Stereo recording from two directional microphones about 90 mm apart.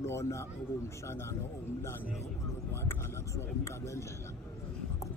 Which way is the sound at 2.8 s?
35° left (ahead or behind).